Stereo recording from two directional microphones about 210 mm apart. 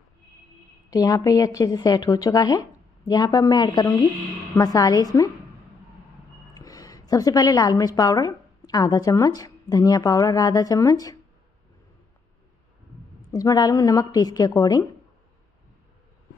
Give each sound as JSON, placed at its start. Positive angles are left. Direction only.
{"t": 0.8, "sound": "a woman's voice", "side_deg": 15}
{"t": 6.5, "sound": "a woman's voice", "side_deg": 15}
{"t": 13.3, "sound": "a woman's voice", "side_deg": 15}